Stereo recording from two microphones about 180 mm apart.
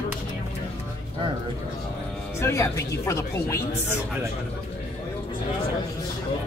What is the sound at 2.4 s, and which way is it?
Speech, 15° left (ahead or behind).